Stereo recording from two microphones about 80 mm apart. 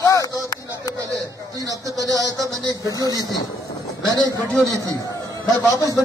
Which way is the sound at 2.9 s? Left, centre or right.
Left.